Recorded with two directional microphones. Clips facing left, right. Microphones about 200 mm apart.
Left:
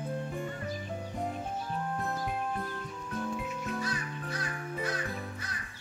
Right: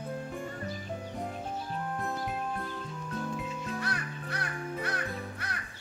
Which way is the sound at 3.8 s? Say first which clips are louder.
Even; 65° right (ahead or behind).